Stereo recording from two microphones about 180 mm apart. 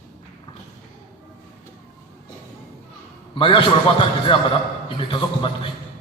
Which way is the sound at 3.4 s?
30° left (ahead or behind).